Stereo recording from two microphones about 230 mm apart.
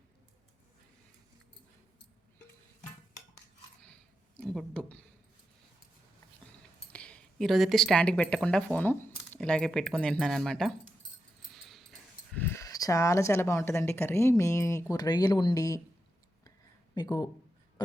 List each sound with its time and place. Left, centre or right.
4.4 s speech: centre
6.9 s speech: centre
11.7 s speech: centre
16.9 s speech: centre